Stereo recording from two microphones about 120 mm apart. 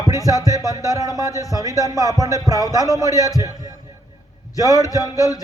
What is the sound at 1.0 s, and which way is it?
Speech, 30° left (ahead or behind).